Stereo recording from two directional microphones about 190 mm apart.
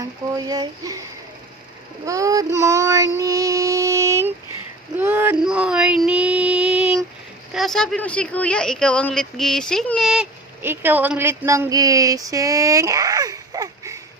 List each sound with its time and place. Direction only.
0.3 s speech: 20° right (ahead or behind)
2.0 s child singing: 15° right (ahead or behind)
4.9 s a sound: 10° right (ahead or behind)
7.5 s speech: centre (ahead or behind); by 14.0 s 20° right (ahead or behind)